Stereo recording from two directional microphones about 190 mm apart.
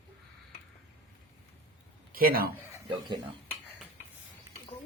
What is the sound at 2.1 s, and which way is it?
Speech, 50° right (ahead or behind).